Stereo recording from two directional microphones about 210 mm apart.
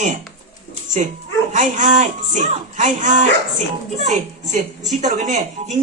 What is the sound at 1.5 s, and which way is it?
A woman's voice, 35° right (ahead or behind).